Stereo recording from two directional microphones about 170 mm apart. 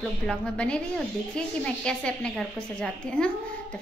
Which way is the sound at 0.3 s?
5° left (ahead or behind).